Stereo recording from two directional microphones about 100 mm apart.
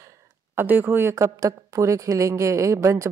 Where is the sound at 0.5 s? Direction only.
20° right (ahead or behind).